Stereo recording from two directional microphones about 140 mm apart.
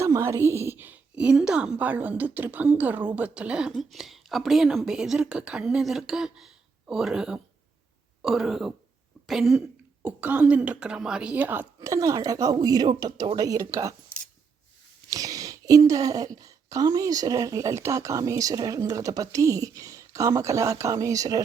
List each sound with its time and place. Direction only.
0.0 s a woman's voice: 20° right (ahead or behind); by 8.7 s 5° right (ahead or behind)
9.2 s cough: centre (ahead or behind)
10.1 s speech: 10° right (ahead or behind)
15.1 s speech: 25° right (ahead or behind)